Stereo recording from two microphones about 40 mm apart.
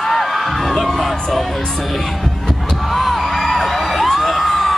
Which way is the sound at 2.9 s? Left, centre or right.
Centre.